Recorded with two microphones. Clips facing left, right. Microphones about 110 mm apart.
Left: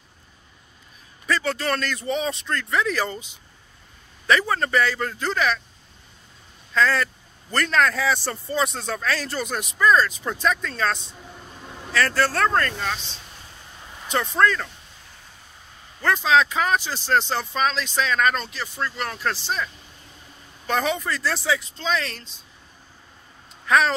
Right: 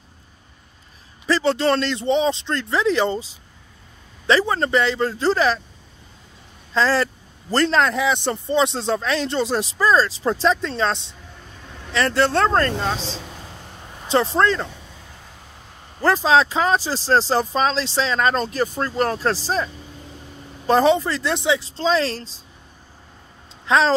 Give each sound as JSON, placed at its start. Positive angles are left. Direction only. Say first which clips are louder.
{"t": 1.2, "sound": "speech", "louder": "right 6 dB", "side_deg": -30}
{"t": 4.3, "sound": "speech", "louder": "right 3 dB", "side_deg": -25}
{"t": 6.7, "sound": "speech", "louder": "right 2 dB", "side_deg": -30}
{"t": 13.0, "sound": "a sound", "louder": "right 11 dB", "side_deg": -90}
{"t": 14.0, "sound": "speech", "louder": "right 3 dB", "side_deg": -30}
{"t": 16.0, "sound": "speech", "louder": "right 3 dB", "side_deg": -35}
{"t": 23.7, "sound": "speech", "louder": "right 2 dB", "side_deg": -25}